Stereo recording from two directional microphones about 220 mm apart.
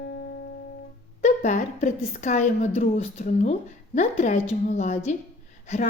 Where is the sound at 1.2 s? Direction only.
35° left (ahead or behind).